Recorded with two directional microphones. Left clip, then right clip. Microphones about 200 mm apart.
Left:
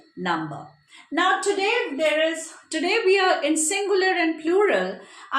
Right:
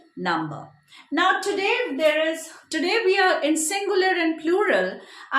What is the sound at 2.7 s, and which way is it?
A woman's voice, 20° right (ahead or behind).